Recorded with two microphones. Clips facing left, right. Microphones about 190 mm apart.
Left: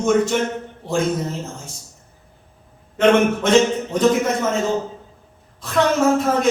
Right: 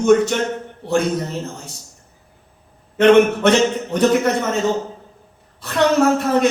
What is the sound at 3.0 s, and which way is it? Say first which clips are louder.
A man's voice: right 4 dB; 65° right (ahead or behind).